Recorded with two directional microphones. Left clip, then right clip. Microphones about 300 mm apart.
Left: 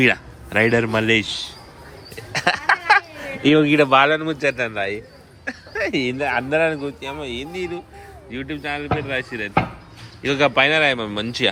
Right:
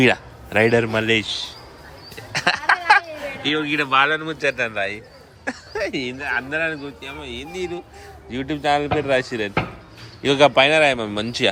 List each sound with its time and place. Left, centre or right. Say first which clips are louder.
0.0 s speech: even; centre
2.1 s a sound: even; centre
3.4 s speech: left 7 dB; centre